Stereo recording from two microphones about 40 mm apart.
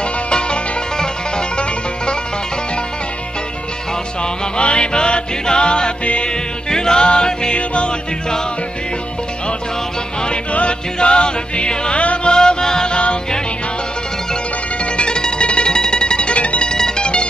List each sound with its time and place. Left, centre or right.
0.3 s music: left
4.2 s music: left
10.2 s music: left
14.9 s music: left
16.6 s music: centre